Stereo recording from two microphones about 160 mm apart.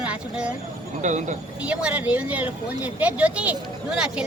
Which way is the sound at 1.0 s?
50° right (ahead or behind).